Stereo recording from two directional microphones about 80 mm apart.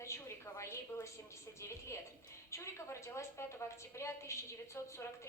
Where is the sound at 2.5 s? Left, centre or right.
Left.